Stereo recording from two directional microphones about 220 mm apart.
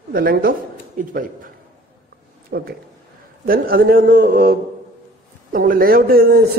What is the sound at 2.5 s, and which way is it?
A man's voice, 50° right (ahead or behind).